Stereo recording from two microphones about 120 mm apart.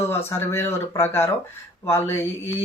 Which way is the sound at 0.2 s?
20° left (ahead or behind).